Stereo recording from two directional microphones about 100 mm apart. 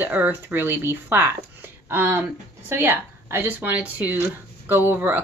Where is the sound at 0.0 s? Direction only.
15° right (ahead or behind).